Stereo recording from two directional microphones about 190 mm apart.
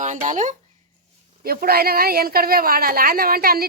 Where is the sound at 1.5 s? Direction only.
55° right (ahead or behind).